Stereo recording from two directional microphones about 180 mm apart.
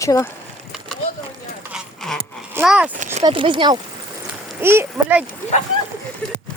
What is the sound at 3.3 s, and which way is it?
Speech, 30° right (ahead or behind).